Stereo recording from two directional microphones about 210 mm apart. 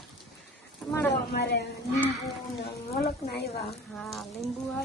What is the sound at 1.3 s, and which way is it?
Speech, 50° left (ahead or behind).